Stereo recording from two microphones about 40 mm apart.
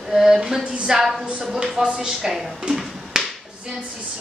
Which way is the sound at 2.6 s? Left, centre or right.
Centre.